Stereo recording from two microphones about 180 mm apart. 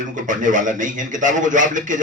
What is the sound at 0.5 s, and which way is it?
A man's voice, 45° right (ahead or behind).